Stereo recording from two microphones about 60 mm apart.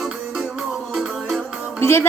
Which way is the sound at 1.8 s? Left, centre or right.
Left.